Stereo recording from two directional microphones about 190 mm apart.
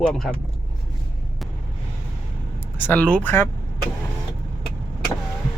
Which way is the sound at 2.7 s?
10° left (ahead or behind).